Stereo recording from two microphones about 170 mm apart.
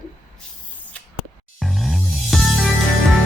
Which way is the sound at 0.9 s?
5° left (ahead or behind).